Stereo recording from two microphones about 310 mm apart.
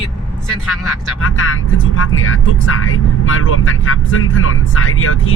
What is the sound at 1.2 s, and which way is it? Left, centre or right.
Speech, left.